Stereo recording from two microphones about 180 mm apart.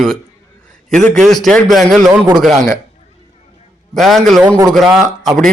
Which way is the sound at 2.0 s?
20° right (ahead or behind).